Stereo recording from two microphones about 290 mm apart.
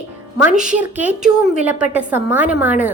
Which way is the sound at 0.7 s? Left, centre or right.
Centre.